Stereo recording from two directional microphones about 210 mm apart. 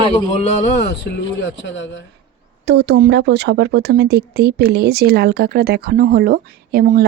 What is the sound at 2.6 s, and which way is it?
Speech, 55° right (ahead or behind).